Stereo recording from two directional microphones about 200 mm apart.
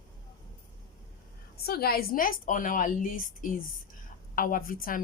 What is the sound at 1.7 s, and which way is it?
A woman's voice, 50° left (ahead or behind).